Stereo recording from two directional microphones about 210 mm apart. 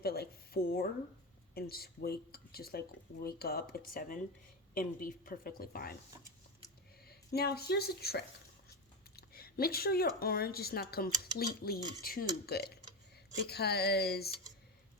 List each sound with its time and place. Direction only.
0.0 s speech: 45° left (ahead or behind)
7.1 s a woman's voice: 50° left (ahead or behind)